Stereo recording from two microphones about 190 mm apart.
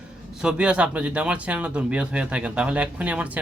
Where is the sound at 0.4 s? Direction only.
5° right (ahead or behind).